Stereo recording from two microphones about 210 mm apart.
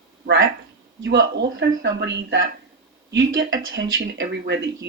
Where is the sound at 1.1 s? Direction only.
60° right (ahead or behind).